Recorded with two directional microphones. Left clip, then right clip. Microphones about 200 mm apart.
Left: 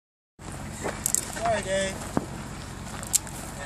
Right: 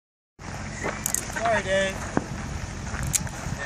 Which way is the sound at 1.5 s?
15° left (ahead or behind).